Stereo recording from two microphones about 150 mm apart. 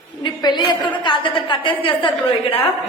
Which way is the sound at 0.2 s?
30° left (ahead or behind).